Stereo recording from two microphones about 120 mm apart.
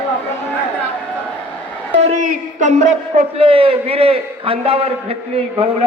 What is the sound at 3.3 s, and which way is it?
A man's voice, 50° right (ahead or behind).